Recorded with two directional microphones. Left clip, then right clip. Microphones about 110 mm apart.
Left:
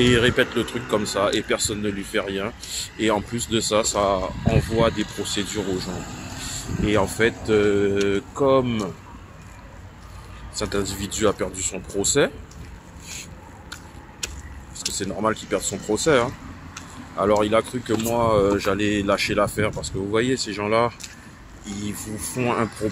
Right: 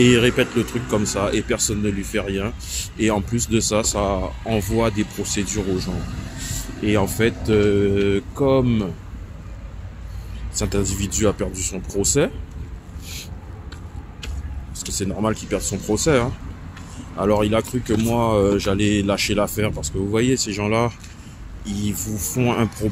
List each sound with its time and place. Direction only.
0.0 s speech: 20° right (ahead or behind)
4.7 s speech: 30° right (ahead or behind)
5.2 s speech: 15° right (ahead or behind)
5.5 s speech: 15° left (ahead or behind)
6.8 s speech: 20° right (ahead or behind)
10.5 s speech: 25° right (ahead or behind)
15.0 s speech: 20° right (ahead or behind)